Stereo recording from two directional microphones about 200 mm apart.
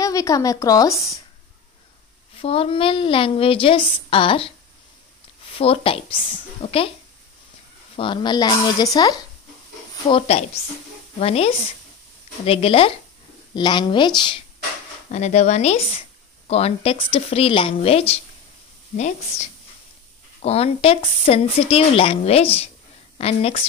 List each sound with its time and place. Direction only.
0.0 s a woman's voice: 15° left (ahead or behind)
2.3 s a woman's voice: 30° left (ahead or behind)
5.5 s a woman's voice: 30° left (ahead or behind)
7.9 s a woman's voice: 25° left (ahead or behind)
10.0 s a woman's voice: 30° left (ahead or behind)
15.0 s a woman's voice: 35° left (ahead or behind)